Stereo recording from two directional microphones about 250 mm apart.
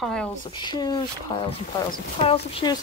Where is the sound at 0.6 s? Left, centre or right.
Centre.